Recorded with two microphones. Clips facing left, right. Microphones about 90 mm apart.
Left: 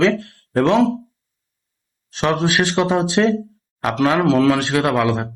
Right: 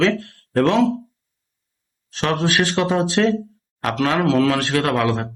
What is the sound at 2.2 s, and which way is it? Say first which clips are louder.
Speech: left 2 dB; 20° left (ahead or behind).